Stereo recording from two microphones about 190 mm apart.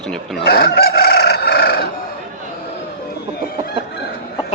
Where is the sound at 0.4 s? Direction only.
55° left (ahead or behind).